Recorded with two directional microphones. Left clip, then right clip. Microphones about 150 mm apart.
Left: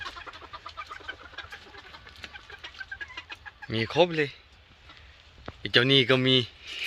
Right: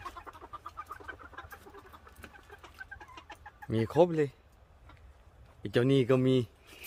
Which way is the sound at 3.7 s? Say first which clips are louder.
Left 2 dB; 35° right (ahead or behind).